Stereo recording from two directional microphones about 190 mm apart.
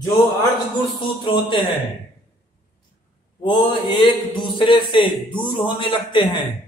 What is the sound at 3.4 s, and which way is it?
Speech, 25° left (ahead or behind).